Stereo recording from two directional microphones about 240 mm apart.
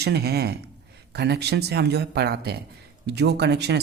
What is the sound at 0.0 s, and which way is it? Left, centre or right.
Speech, right.